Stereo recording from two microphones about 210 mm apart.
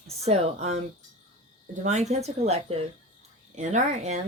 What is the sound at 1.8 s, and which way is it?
Speech, 35° right (ahead or behind).